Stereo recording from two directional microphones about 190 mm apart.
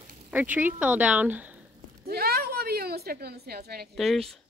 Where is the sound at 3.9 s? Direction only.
Centre (ahead or behind).